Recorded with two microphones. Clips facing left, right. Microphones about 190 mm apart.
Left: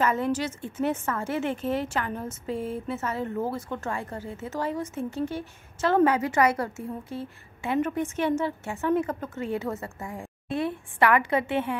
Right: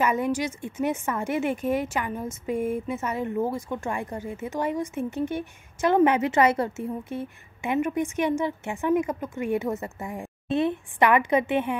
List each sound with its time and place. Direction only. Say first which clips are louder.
0.0 s a woman's voice: right 1 dB; 15° right (ahead or behind)